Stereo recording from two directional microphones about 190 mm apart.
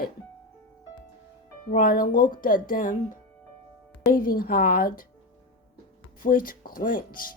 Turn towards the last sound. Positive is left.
turn(degrees=45)  # may be behind; listen again after turning